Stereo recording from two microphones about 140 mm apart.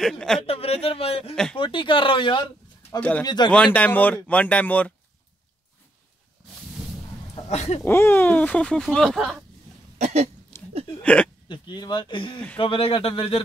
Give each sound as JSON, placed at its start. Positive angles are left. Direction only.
{"t": 0.0, "sound": "speech", "side_deg": 5}
{"t": 0.4, "sound": "a man's voice", "side_deg": 45}
{"t": 1.3, "sound": "speech", "side_deg": 5}
{"t": 1.6, "sound": "speech", "side_deg": 35}
{"t": 3.0, "sound": "speech", "side_deg": 10}
{"t": 3.3, "sound": "speech", "side_deg": 30}
{"t": 3.5, "sound": "speech", "side_deg": 10}
{"t": 7.4, "sound": "a man's voice", "side_deg": 50}
{"t": 7.8, "sound": "speech", "side_deg": 15}
{"t": 9.9, "sound": "hiccup", "side_deg": -55}
{"t": 10.5, "sound": "hiccup", "side_deg": 20}
{"t": 11.4, "sound": "speech", "side_deg": 35}